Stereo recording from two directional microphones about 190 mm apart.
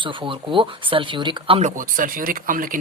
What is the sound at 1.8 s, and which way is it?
Speech, 45° right (ahead or behind).